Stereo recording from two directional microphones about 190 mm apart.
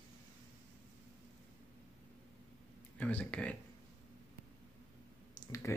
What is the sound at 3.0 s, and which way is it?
Speech, 10° left (ahead or behind).